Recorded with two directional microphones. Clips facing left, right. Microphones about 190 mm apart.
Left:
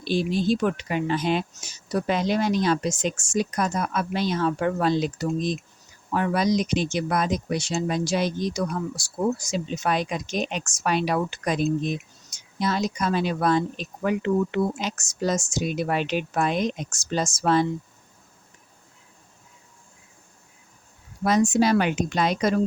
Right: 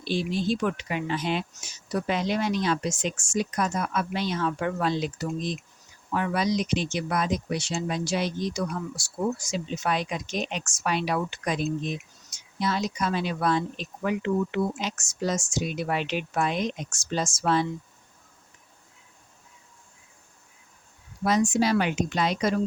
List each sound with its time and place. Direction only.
0.0 s speech: 40° left (ahead or behind)
21.2 s speech: 45° left (ahead or behind)